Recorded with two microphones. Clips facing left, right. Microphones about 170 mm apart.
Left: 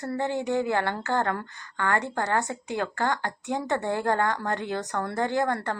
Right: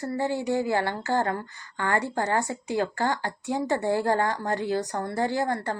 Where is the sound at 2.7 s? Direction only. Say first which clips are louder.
Right 2 dB; 55° left (ahead or behind).